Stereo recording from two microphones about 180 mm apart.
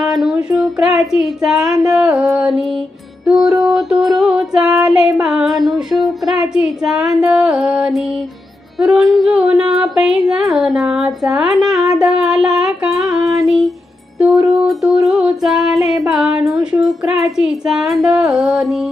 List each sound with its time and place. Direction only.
0.0 s child singing: centre (ahead or behind)
1.8 s music: 5° right (ahead or behind)
11.8 s humming: 5° right (ahead or behind)
13.2 s female singing: 20° right (ahead or behind)
13.5 s a sound: centre (ahead or behind)
14.2 s music: 5° right (ahead or behind)